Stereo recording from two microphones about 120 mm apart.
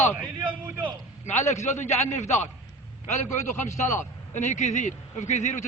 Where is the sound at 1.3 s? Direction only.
75° left (ahead or behind).